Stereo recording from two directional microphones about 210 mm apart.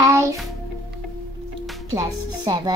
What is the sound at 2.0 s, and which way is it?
Speech, 20° right (ahead or behind).